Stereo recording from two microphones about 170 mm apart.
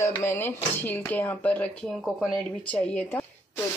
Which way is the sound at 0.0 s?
15° left (ahead or behind).